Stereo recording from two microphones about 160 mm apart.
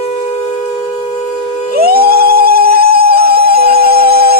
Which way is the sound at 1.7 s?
70° right (ahead or behind).